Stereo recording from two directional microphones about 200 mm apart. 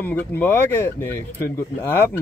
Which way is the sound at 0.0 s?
10° left (ahead or behind).